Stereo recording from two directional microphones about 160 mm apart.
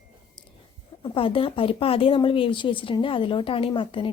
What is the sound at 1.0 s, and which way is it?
Speech, 35° left (ahead or behind).